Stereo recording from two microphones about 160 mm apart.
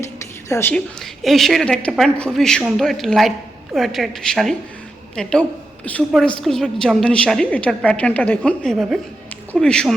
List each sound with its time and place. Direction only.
0.4 s a woman's voice: 20° left (ahead or behind)
1.2 s a woman's voice: centre (ahead or behind)